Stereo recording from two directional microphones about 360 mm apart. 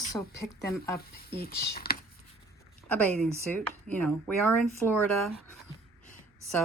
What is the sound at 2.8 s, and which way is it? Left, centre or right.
Speech, centre.